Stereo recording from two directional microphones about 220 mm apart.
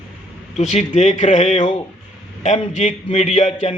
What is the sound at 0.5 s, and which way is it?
A man's voice, 30° left (ahead or behind).